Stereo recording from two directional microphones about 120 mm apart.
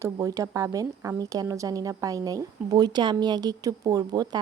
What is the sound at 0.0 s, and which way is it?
A woman's voice, 30° right (ahead or behind).